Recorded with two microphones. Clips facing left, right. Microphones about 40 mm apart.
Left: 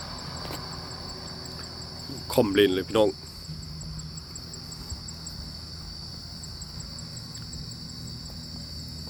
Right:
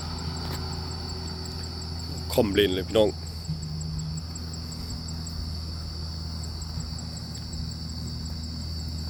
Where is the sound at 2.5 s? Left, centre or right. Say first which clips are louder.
Left 1 dB; centre.